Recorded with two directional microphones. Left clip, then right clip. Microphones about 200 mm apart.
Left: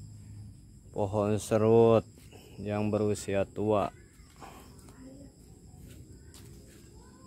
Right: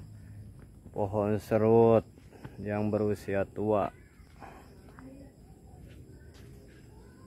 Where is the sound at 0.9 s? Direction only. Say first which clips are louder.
Even; 10° left (ahead or behind).